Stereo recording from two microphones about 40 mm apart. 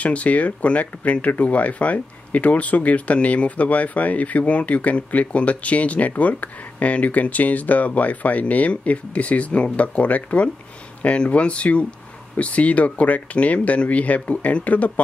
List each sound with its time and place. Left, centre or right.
0.0 s speech: left